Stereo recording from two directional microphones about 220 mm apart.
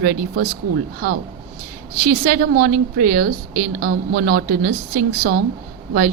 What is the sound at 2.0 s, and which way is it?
A woman's voice, 40° right (ahead or behind).